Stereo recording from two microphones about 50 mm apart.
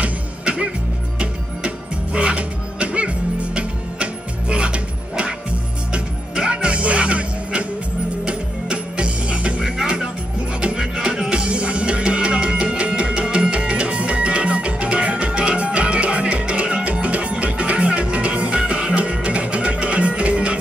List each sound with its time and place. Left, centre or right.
0.0 s music: right
2.1 s music: right
9.6 s music: centre